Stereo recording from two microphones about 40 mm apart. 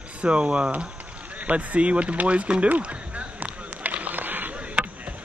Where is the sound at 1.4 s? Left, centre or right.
Right.